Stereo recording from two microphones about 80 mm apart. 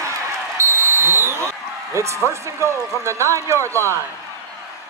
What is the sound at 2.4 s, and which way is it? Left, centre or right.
A man's voice, right.